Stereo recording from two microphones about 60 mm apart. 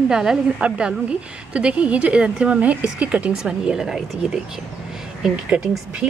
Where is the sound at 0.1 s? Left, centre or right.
Centre.